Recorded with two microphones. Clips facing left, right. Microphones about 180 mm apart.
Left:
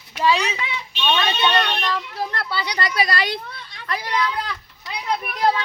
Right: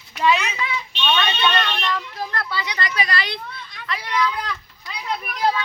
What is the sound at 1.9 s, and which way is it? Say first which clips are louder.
Speech: left 1 dB; 30° left (ahead or behind).